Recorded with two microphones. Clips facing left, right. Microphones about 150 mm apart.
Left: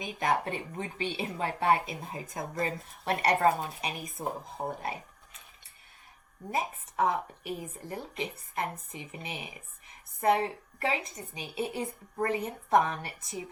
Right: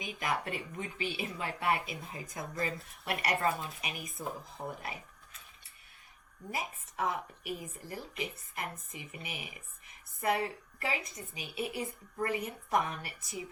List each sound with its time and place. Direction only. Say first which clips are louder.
0.0 s speech: left 6 dB; 30° left (ahead or behind)
6.5 s speech: left 6 dB; 30° left (ahead or behind)